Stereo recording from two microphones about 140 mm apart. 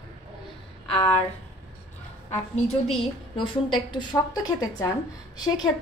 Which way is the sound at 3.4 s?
35° left (ahead or behind).